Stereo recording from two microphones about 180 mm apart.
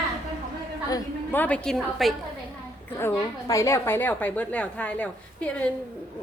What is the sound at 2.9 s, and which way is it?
A woman's voice, 15° left (ahead or behind).